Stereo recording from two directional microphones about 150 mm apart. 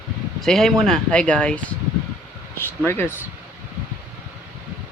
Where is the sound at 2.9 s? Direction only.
15° left (ahead or behind).